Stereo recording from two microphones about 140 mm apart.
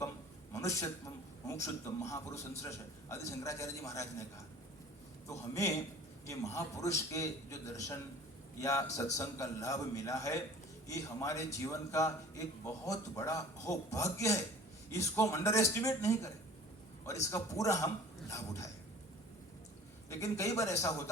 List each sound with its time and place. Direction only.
0.5 s a man's voice: 20° left (ahead or behind)
17.3 s a man's voice: 20° left (ahead or behind)
20.1 s a man's voice: 20° left (ahead or behind)